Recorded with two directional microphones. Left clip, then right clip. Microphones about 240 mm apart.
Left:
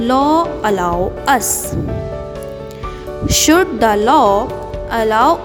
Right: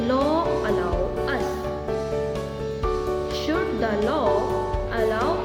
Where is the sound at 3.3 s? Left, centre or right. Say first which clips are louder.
Left 12 dB; left.